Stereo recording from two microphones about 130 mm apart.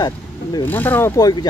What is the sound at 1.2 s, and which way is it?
Speech, 30° left (ahead or behind).